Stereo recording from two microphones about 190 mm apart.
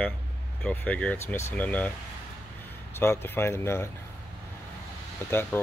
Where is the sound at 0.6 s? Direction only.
10° left (ahead or behind).